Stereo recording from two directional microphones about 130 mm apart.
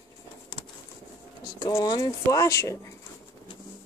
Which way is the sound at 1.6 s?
30° left (ahead or behind).